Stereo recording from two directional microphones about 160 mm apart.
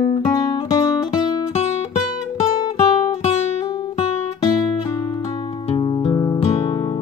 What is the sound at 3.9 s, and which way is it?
Music, 30° left (ahead or behind).